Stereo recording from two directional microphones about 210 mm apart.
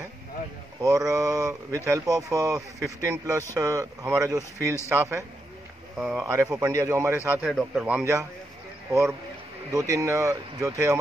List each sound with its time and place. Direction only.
0.7 s speech: 15° right (ahead or behind)
9.7 s speech: 15° right (ahead or behind)